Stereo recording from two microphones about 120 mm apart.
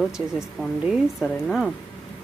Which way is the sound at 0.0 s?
Centre (ahead or behind).